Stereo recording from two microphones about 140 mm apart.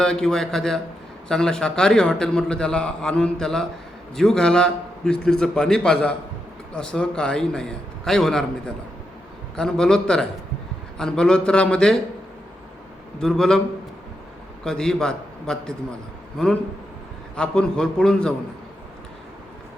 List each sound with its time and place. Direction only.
0.0 s a man's voice: 5° left (ahead or behind)
13.1 s a man's voice: 5° left (ahead or behind)
14.6 s a man's voice: 5° left (ahead or behind)